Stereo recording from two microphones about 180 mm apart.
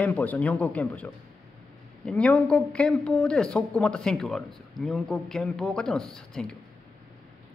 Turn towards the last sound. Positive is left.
turn(degrees=0)  # may be behind; listen again after turning